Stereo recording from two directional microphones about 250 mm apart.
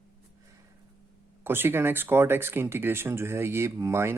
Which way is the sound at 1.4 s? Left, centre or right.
Centre.